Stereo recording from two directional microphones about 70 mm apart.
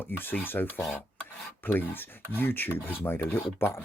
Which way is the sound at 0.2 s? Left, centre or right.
Left.